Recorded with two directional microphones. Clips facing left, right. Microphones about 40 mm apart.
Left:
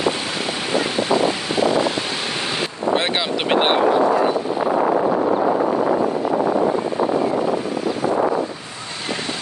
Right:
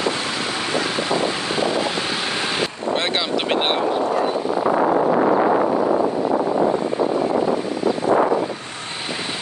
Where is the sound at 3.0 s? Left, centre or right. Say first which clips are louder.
Even; centre.